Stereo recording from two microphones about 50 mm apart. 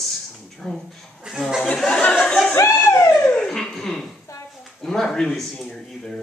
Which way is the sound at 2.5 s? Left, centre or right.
Left.